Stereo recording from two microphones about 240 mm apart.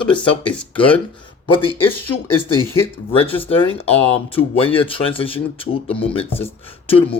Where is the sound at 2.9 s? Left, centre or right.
Left.